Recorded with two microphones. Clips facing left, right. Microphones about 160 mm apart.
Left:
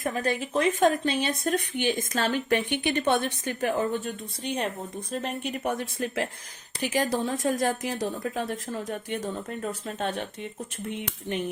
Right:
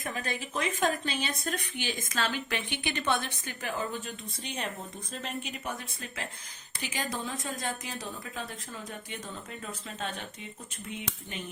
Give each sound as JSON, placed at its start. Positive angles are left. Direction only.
{"t": 0.0, "sound": "speech", "side_deg": 40}
{"t": 1.5, "sound": "a woman's voice", "side_deg": 55}
{"t": 7.3, "sound": "a woman's voice", "side_deg": 60}